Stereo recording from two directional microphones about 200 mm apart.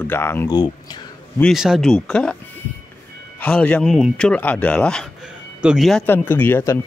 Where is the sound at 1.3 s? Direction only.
Centre (ahead or behind).